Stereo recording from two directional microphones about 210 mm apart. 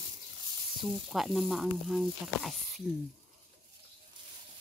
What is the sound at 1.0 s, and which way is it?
Speech, centre (ahead or behind).